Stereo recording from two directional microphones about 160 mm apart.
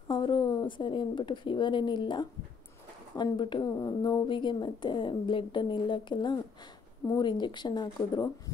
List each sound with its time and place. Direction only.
0.1 s speech: 30° left (ahead or behind)